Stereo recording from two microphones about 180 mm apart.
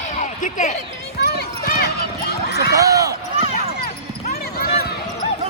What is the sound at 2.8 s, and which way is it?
Speech, 20° right (ahead or behind).